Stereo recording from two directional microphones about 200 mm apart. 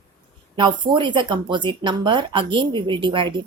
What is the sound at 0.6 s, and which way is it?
A woman's voice, 25° right (ahead or behind).